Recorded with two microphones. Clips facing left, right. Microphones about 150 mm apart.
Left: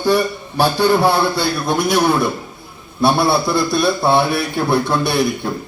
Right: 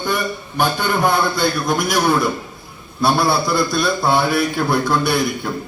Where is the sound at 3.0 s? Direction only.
25° left (ahead or behind).